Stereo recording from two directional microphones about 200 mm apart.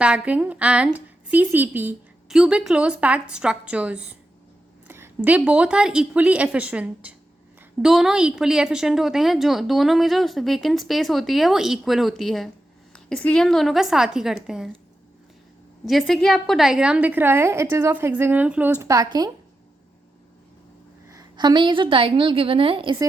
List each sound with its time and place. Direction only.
0.0 s a woman's voice: 5° right (ahead or behind)
15.9 s a woman's voice: centre (ahead or behind); by 19.3 s 20° right (ahead or behind)
21.1 s a woman's voice: 20° right (ahead or behind)